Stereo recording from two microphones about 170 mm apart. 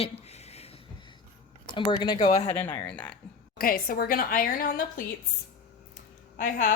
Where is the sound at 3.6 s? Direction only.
60° left (ahead or behind).